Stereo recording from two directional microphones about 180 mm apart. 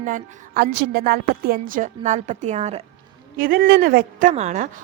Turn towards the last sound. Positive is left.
turn(degrees=-40)  # may be behind; listen again after turning